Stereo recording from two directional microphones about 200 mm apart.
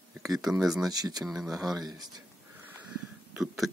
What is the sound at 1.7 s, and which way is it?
Speech, 20° right (ahead or behind).